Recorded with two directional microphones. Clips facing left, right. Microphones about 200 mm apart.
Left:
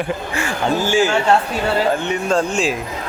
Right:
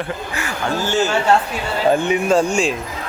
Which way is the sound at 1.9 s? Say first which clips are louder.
Right 3 dB; 10° right (ahead or behind).